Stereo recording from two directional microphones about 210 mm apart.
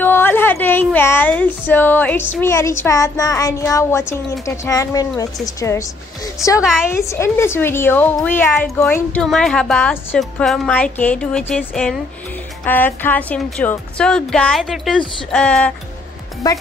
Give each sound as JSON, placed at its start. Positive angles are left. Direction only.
{"t": 0.0, "sound": "a woman's voice", "side_deg": 10}
{"t": 6.6, "sound": "a woman's voice", "side_deg": 0}
{"t": 6.9, "sound": "a woman's voice", "side_deg": 15}
{"t": 16.4, "sound": "a woman's voice", "side_deg": 15}